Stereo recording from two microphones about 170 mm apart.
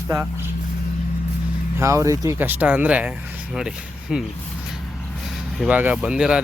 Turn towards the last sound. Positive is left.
turn(degrees=-5)  # may be behind; listen again after turning